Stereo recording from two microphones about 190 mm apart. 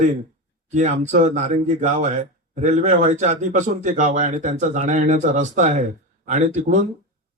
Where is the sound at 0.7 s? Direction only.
40° right (ahead or behind).